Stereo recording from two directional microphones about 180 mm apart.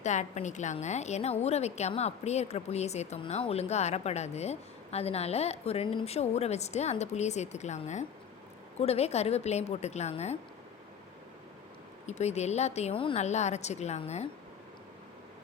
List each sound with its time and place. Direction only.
0.0 s a woman's voice: 40° left (ahead or behind)
12.0 s a woman's voice: 35° left (ahead or behind)